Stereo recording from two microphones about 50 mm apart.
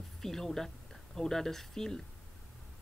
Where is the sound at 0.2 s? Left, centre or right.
Centre.